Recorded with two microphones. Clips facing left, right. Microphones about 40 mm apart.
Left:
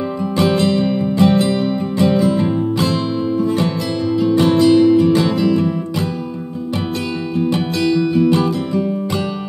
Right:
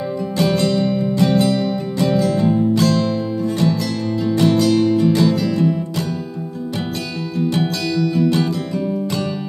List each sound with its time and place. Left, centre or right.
0.4 s music: left
7.3 s music: left